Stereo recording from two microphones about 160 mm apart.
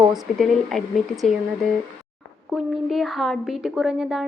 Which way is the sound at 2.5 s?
Centre (ahead or behind).